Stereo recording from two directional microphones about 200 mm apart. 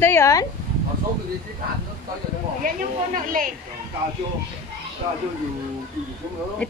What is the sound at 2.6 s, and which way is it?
Speech, 45° right (ahead or behind).